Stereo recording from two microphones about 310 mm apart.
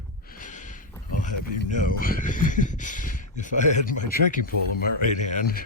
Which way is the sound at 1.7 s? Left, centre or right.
Left.